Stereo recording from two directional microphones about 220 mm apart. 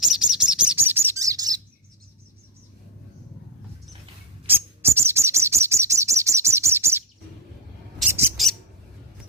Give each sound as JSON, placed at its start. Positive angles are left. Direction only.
{"t": 0.0, "sound": "bird", "side_deg": -5}
{"t": 4.4, "sound": "bird", "side_deg": -10}
{"t": 8.4, "sound": "bird", "side_deg": 0}